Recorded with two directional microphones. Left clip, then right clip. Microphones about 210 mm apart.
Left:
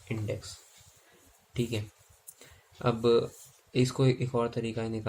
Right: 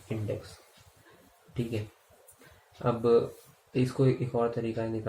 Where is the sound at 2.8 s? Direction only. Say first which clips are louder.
Right 1 dB; 50° left (ahead or behind).